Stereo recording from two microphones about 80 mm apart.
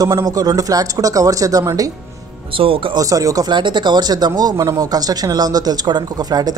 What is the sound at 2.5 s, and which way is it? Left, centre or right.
Speech, right.